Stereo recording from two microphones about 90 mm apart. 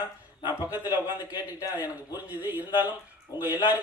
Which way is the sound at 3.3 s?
45° left (ahead or behind).